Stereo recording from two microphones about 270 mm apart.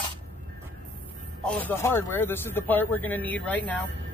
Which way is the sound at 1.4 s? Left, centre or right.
Centre.